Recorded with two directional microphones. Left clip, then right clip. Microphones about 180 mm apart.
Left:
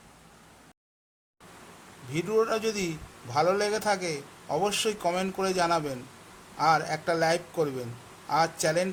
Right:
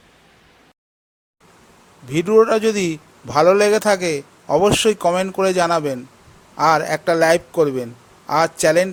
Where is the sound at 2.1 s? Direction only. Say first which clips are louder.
Right 12 dB; 45° right (ahead or behind).